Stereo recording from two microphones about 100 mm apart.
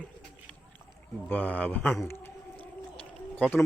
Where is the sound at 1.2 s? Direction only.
15° left (ahead or behind).